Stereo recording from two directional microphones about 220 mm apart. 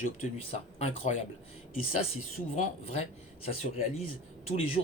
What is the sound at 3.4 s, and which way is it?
Speech, 30° left (ahead or behind).